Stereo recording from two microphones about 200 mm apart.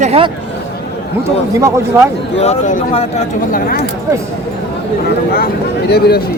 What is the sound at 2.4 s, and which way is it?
Speech, 35° left (ahead or behind).